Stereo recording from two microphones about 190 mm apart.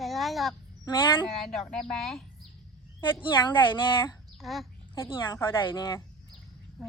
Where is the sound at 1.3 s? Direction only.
Centre (ahead or behind).